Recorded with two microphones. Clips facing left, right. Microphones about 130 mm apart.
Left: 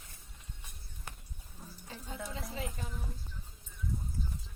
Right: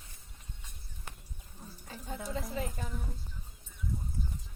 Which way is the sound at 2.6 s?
45° right (ahead or behind).